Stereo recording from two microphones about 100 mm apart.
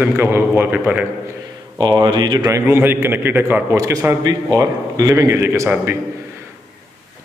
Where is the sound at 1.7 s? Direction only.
45° right (ahead or behind).